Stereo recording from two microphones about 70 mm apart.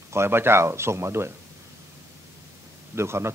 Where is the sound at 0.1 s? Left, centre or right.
Right.